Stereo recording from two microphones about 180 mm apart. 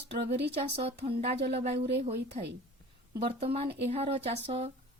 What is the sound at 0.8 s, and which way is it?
Speech, 35° right (ahead or behind).